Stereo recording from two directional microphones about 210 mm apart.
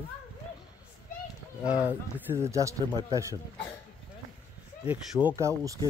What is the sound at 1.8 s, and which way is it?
Speech, 10° right (ahead or behind).